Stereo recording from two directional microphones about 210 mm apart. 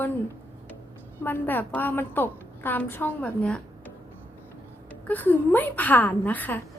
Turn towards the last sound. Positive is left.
turn(degrees=10)  # may be behind; listen again after turning